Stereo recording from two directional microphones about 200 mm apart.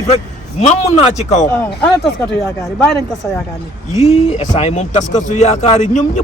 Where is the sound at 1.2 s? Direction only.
35° left (ahead or behind).